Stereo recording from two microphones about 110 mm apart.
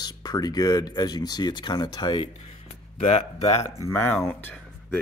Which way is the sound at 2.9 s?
70° left (ahead or behind).